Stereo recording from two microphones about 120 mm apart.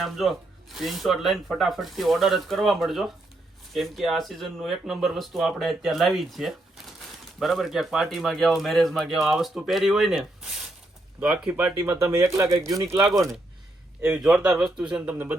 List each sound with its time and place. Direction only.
0.0 s a man's voice: centre (ahead or behind)
11.8 s speech: 25° right (ahead or behind)
14.0 s a man's voice: 10° right (ahead or behind)